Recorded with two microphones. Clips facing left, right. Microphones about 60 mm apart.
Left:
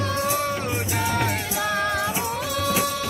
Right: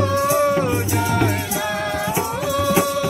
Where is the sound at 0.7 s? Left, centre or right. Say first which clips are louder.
Right 5 dB; centre.